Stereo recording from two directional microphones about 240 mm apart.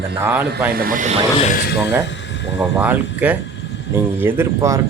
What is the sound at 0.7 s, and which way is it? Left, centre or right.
Speech, right.